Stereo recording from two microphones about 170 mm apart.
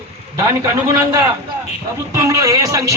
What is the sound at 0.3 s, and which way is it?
A man's voice, 20° right (ahead or behind).